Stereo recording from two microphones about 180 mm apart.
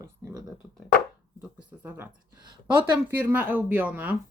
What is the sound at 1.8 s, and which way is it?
Speech, 10° right (ahead or behind).